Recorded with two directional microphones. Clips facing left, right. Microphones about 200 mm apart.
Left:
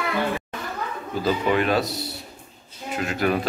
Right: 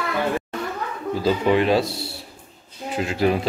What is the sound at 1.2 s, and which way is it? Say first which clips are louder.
Speech: right 3 dB; 25° right (ahead or behind).